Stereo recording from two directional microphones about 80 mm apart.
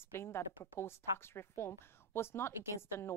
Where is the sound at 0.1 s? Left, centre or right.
Left.